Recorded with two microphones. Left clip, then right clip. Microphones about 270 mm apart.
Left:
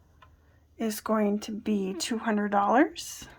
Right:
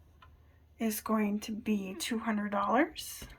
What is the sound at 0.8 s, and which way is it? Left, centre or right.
Speech, centre.